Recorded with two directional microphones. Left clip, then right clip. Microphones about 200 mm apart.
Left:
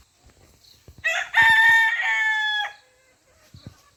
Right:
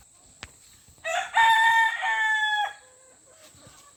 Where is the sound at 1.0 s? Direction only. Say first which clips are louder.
Left 3 dB; 20° left (ahead or behind).